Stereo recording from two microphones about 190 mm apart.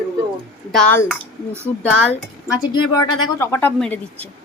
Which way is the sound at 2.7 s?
20° left (ahead or behind).